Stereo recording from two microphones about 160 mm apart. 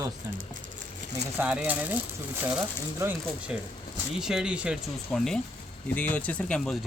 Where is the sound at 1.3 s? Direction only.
10° right (ahead or behind).